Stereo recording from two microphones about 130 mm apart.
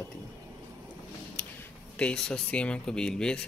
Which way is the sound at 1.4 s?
10° left (ahead or behind).